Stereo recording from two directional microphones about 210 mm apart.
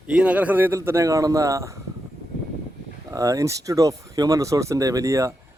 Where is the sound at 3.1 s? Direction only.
15° right (ahead or behind).